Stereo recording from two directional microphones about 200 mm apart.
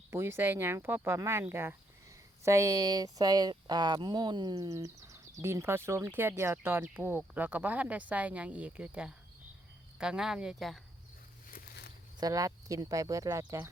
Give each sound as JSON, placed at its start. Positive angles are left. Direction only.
{"t": 0.1, "sound": "speech", "side_deg": -15}
{"t": 12.2, "sound": "speech", "side_deg": -15}